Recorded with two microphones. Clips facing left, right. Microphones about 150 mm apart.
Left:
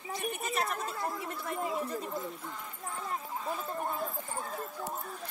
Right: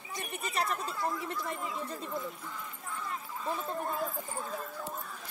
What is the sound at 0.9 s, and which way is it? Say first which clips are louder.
Chatter: right 1 dB; centre (ahead or behind).